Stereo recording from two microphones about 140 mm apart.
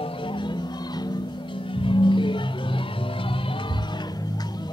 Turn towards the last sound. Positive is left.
turn(degrees=35)  # may be behind; listen again after turning